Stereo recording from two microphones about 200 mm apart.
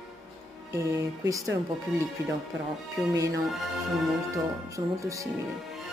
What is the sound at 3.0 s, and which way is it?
Speech, centre (ahead or behind).